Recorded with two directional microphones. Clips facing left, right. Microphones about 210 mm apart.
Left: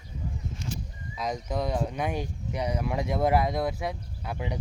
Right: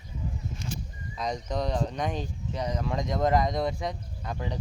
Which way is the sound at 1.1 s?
5° left (ahead or behind).